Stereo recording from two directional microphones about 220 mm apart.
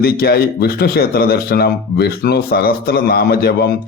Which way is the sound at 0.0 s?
45° left (ahead or behind).